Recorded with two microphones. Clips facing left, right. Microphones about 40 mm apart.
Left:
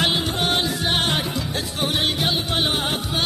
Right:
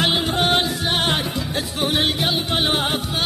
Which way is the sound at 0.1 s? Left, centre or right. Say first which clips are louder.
Right 3 dB; centre.